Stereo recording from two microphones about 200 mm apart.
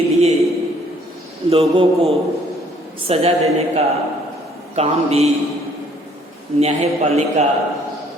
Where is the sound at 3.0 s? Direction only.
30° right (ahead or behind).